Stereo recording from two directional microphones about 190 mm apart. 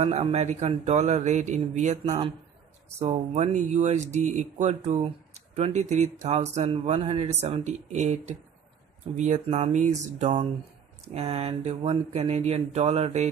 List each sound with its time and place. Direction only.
0.0 s a man's voice: 35° right (ahead or behind)